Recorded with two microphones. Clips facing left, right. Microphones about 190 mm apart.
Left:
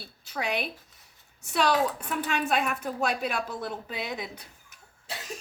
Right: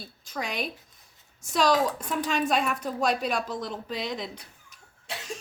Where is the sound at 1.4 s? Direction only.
65° left (ahead or behind).